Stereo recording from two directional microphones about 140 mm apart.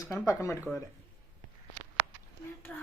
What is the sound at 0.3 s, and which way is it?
Speech, 20° left (ahead or behind).